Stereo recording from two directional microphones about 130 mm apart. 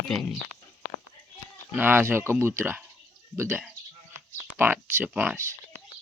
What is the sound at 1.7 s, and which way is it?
Speech, 15° right (ahead or behind).